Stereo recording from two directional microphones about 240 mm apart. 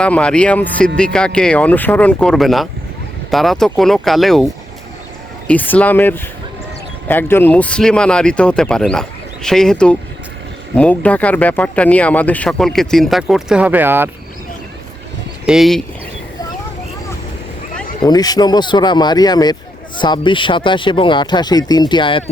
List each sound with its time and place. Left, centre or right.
0.0 s speech: centre
15.4 s speech: centre
18.0 s speech: centre